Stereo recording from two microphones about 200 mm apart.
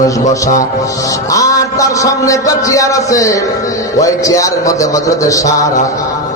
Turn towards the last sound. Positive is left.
turn(degrees=15)  # may be behind; listen again after turning